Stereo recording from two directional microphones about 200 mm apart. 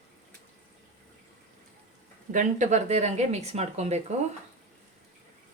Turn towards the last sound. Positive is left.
turn(degrees=-35)  # may be behind; listen again after turning